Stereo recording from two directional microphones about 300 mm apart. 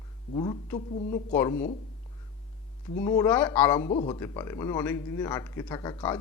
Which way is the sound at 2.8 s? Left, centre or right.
Centre.